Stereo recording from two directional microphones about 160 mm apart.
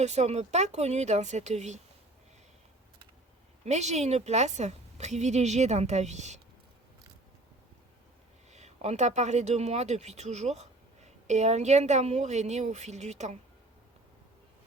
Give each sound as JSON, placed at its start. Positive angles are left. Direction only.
{"t": 0.0, "sound": "speech", "side_deg": -45}
{"t": 3.6, "sound": "speech", "side_deg": -45}
{"t": 8.5, "sound": "speech", "side_deg": -45}